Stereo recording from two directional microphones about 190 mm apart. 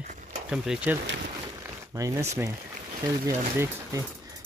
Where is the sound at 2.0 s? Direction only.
15° right (ahead or behind).